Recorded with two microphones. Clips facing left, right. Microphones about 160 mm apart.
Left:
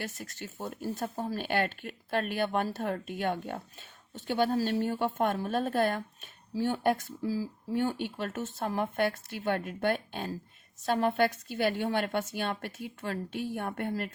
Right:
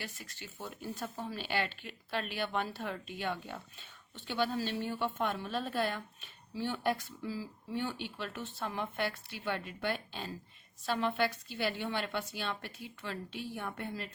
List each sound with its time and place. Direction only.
0.0 s speech: 45° left (ahead or behind)